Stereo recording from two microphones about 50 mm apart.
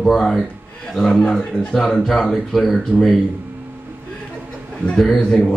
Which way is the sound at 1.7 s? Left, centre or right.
Centre.